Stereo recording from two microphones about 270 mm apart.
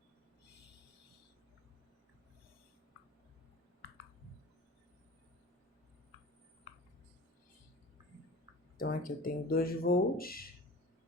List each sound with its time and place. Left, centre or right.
8.8 s speech: left